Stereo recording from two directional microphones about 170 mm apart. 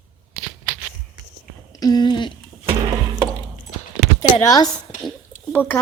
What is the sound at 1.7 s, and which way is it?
Speech, 25° left (ahead or behind).